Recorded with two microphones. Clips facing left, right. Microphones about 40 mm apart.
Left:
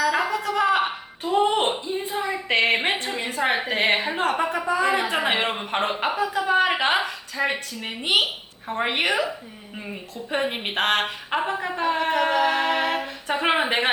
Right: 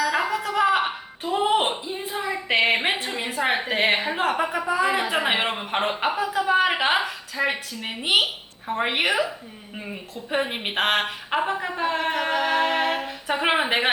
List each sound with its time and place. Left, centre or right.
0.0 s a woman's voice: centre